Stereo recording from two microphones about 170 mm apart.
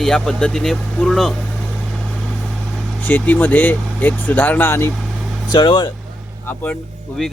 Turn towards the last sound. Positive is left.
turn(degrees=0)  # may be behind; listen again after turning